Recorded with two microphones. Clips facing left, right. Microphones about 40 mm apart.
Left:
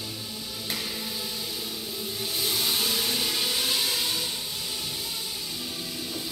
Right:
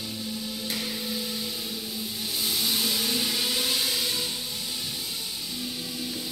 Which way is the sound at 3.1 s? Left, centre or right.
Centre.